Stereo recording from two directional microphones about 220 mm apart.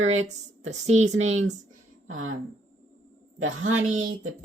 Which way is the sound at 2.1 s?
65° right (ahead or behind).